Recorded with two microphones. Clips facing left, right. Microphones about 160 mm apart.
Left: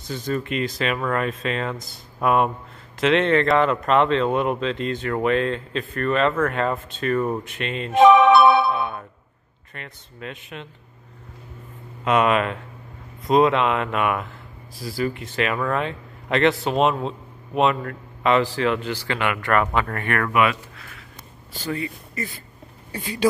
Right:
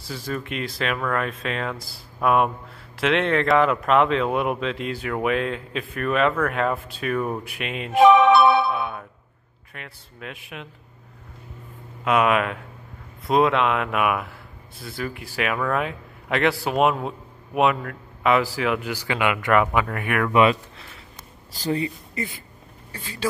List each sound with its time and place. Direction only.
0.1 s a man's voice: centre (ahead or behind)
8.1 s music: 90° left
8.7 s a sound: 5° right (ahead or behind)
9.8 s speech: 5° right (ahead or behind)
12.0 s a man's voice: 5° right (ahead or behind)
20.3 s a sound: 30° right (ahead or behind)
21.5 s speech: 35° right (ahead or behind)
22.9 s speech: 15° left (ahead or behind)